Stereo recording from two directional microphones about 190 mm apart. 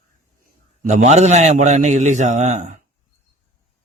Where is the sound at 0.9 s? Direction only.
35° right (ahead or behind).